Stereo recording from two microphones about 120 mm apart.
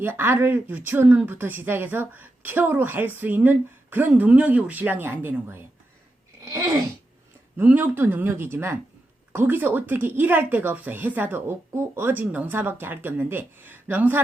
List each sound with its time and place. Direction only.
0.0 s speech: 20° right (ahead or behind)
6.4 s sneeze: 25° right (ahead or behind)
7.5 s speech: 15° right (ahead or behind)